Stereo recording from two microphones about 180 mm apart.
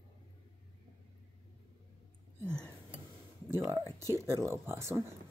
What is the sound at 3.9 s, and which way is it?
Speech, 20° left (ahead or behind).